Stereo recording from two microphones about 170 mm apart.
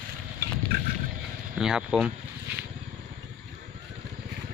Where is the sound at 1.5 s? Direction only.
5° right (ahead or behind).